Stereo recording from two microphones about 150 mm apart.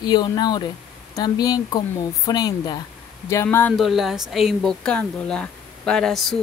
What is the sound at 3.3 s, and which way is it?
Speech, 15° left (ahead or behind).